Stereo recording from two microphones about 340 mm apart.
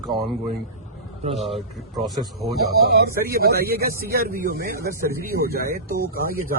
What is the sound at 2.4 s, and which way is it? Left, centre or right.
Speech, right.